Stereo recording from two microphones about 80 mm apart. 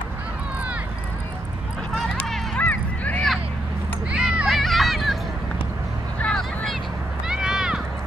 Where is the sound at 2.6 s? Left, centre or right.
Centre.